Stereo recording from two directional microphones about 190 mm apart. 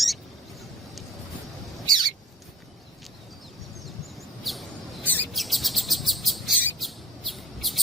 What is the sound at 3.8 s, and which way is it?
Chirp, centre (ahead or behind).